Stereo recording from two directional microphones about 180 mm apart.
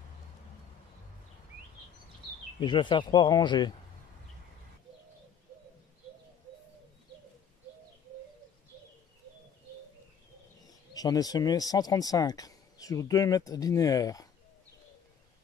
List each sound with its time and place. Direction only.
2.6 s speech: 25° left (ahead or behind)
10.9 s speech: 20° left (ahead or behind)